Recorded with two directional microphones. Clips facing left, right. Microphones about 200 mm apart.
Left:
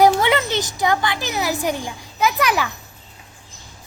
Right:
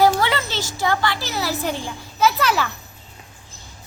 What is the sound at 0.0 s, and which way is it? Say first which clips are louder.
Speech: left 3 dB; 20° left (ahead or behind).